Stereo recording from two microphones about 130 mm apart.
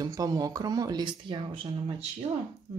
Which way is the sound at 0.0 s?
30° right (ahead or behind).